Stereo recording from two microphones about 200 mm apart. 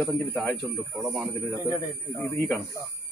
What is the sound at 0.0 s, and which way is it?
A man's voice, 5° left (ahead or behind).